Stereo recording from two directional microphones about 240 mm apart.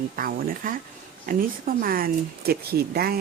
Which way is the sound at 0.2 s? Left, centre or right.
Right.